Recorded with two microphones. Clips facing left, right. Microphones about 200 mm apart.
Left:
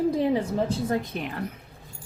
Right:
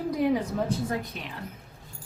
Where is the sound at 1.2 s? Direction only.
60° left (ahead or behind).